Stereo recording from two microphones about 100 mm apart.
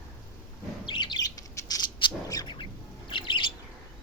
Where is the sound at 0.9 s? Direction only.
50° left (ahead or behind).